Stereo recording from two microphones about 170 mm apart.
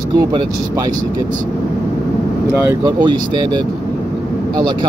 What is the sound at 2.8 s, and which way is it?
Speech, 25° right (ahead or behind).